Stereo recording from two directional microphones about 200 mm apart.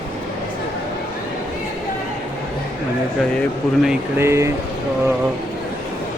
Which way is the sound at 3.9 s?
10° right (ahead or behind).